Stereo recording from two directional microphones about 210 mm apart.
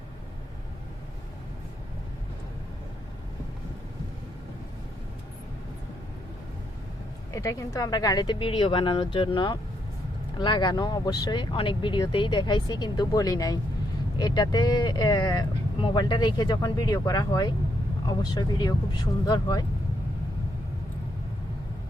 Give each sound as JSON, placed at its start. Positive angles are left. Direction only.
{"t": 7.3, "sound": "speech", "side_deg": 15}